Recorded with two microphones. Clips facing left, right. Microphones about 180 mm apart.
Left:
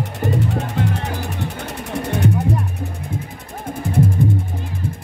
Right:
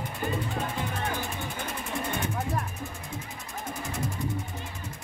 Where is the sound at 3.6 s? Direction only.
55° left (ahead or behind).